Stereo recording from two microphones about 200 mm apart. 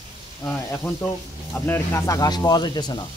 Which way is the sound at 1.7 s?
15° left (ahead or behind).